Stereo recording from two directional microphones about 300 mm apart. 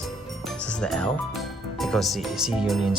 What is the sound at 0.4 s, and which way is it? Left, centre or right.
Speech, centre.